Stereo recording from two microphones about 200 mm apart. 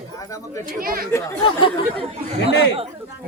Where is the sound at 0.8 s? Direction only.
45° right (ahead or behind).